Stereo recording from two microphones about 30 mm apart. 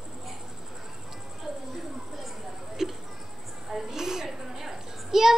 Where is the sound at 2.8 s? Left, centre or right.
Centre.